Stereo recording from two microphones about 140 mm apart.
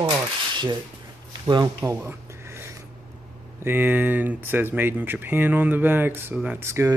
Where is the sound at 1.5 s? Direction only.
25° right (ahead or behind).